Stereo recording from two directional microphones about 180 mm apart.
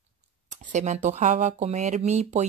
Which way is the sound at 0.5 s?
40° right (ahead or behind).